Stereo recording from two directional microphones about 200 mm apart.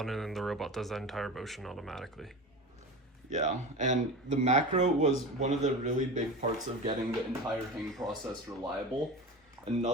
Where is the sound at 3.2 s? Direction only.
35° right (ahead or behind).